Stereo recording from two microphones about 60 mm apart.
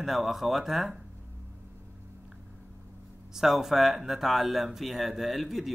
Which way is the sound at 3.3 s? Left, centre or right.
Centre.